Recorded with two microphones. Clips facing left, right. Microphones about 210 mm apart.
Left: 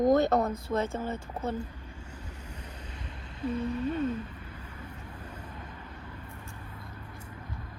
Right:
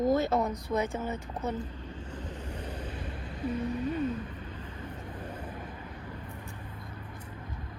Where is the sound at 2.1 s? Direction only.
10° left (ahead or behind).